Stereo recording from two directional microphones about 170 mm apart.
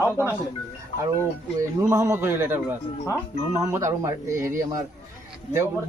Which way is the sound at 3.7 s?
15° right (ahead or behind).